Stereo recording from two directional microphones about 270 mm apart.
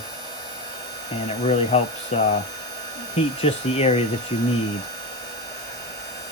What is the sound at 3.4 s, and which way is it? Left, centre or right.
Speech, left.